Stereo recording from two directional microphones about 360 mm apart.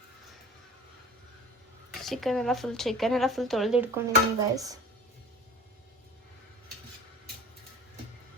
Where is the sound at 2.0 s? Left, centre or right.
Centre.